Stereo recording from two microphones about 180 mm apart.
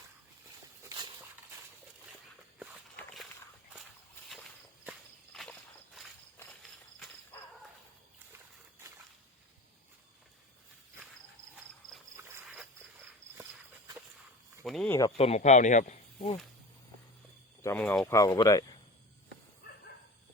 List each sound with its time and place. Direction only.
0.9 s a sound: 25° right (ahead or behind)
2.9 s walk: 5° left (ahead or behind)
5.3 s walk: 5° left (ahead or behind)
11.5 s cricket: centre (ahead or behind)
12.1 s a sound: 15° right (ahead or behind)
14.6 s speech: centre (ahead or behind)
15.2 s speech: 40° left (ahead or behind)
17.6 s speech: 10° left (ahead or behind)